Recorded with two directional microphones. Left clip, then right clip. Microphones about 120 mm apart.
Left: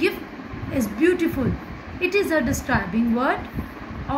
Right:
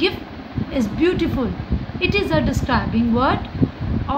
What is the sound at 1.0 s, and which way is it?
Speech, 90° right.